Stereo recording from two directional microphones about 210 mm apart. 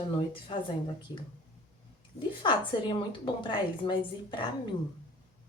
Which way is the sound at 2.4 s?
20° left (ahead or behind).